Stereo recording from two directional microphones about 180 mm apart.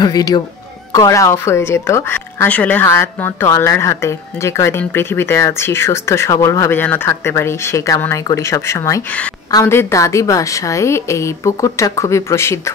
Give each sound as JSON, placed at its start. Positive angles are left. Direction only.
{"t": 0.0, "sound": "speech", "side_deg": 20}